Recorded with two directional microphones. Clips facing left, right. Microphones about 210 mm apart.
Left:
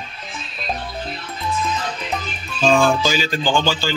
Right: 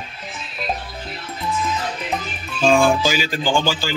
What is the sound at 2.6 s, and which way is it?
Speech, 10° right (ahead or behind).